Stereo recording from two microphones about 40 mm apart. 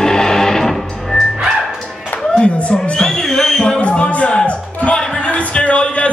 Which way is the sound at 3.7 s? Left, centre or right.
Left.